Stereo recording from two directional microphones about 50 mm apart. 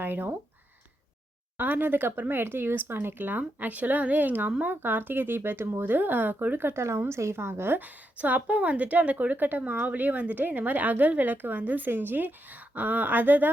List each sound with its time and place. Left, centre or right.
0.0 s speech: right
1.5 s a woman's voice: right
7.1 s a woman's voice: right
7.8 s a woman's voice: right